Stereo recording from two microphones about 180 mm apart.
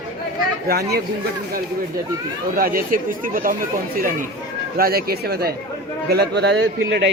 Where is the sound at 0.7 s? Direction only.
60° right (ahead or behind).